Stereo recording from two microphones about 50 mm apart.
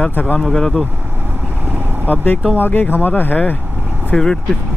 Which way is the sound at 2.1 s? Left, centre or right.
Left.